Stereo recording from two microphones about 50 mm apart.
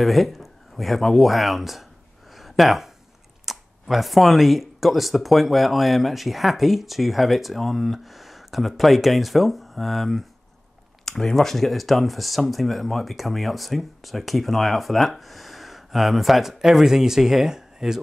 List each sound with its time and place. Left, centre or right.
0.0 s speech: centre
2.3 s a sound: centre
3.4 s speech: centre